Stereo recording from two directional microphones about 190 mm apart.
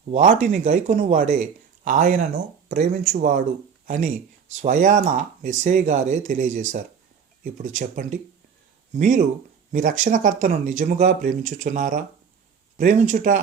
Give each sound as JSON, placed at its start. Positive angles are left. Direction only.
{"t": 0.1, "sound": "speech", "side_deg": -40}